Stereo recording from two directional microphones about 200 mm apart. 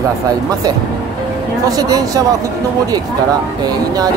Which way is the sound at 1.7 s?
20° right (ahead or behind).